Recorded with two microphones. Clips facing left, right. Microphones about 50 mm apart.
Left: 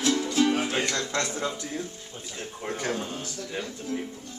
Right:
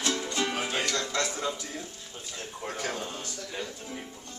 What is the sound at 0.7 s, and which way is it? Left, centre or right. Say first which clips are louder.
Speech: left 2 dB; left.